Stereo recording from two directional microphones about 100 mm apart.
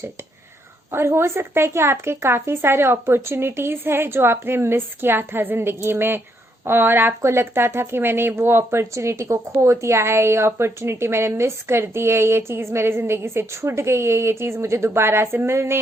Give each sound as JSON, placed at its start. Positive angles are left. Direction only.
{"t": 0.9, "sound": "speech", "side_deg": -25}